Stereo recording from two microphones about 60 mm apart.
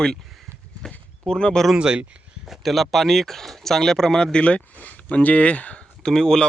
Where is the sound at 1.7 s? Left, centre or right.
Centre.